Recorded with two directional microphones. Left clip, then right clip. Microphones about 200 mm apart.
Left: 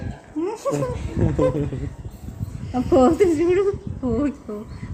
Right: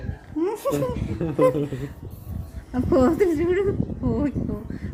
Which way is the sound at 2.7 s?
5° right (ahead or behind).